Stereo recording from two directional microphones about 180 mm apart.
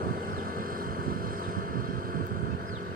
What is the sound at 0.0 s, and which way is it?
Vehicle, 55° right (ahead or behind).